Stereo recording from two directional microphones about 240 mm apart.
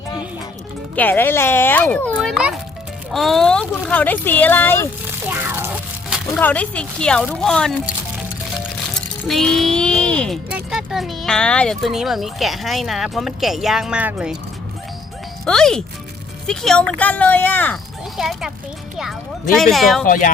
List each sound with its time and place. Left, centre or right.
0.9 s speech: centre
5.3 s music: centre
6.3 s speech: centre
9.2 s speech: centre
15.4 s speech: centre
20.1 s speech: left